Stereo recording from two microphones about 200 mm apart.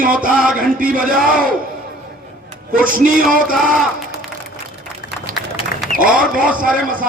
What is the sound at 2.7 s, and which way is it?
Speech, 45° right (ahead or behind).